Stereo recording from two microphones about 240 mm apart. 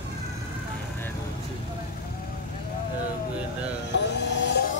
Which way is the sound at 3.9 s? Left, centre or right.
Left.